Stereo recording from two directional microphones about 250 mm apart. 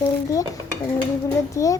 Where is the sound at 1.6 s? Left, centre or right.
Centre.